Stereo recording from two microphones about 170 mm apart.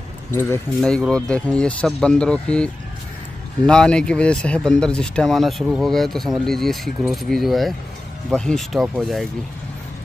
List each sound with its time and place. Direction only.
0.3 s speech: 15° left (ahead or behind)
0.7 s speech: centre (ahead or behind)